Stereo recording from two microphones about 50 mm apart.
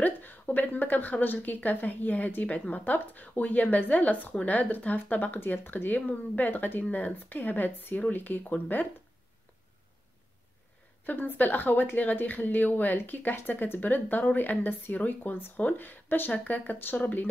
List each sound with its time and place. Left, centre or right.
0.0 s speech: left
2.8 s speech: left
11.1 s speech: left